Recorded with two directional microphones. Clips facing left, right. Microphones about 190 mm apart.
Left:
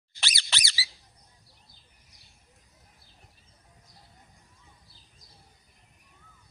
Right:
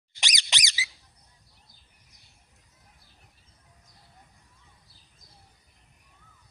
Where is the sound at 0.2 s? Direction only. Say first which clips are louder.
Right 1 dB; 15° right (ahead or behind).